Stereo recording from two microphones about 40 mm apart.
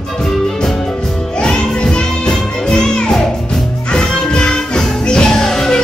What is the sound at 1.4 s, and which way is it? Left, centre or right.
Music, left.